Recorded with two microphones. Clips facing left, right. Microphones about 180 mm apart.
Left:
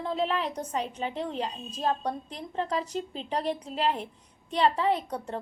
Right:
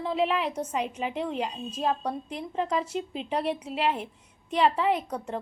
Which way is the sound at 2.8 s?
35° left (ahead or behind).